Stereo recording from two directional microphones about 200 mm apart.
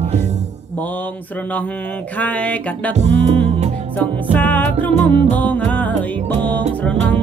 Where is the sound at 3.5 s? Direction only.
35° right (ahead or behind).